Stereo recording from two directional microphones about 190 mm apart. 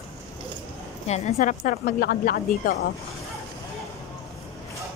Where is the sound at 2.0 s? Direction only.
55° left (ahead or behind).